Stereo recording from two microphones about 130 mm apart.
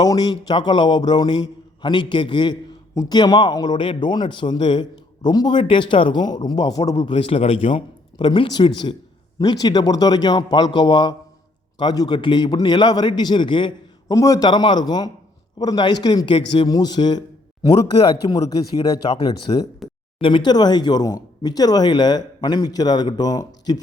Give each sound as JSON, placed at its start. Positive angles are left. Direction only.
{"t": 0.0, "sound": "a man's voice", "side_deg": 30}
{"t": 8.2, "sound": "a man's voice", "side_deg": 35}
{"t": 14.2, "sound": "a man's voice", "side_deg": 30}